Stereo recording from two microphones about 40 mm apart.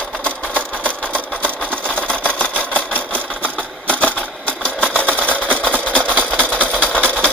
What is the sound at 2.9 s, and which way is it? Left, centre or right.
Engine, left.